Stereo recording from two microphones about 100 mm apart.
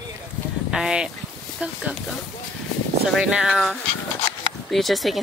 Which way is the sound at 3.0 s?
5° right (ahead or behind).